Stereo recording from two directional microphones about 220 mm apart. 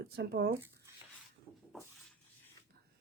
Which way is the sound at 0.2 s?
45° right (ahead or behind).